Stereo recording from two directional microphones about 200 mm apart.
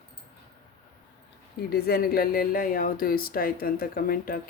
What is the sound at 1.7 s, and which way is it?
Speech, 50° left (ahead or behind).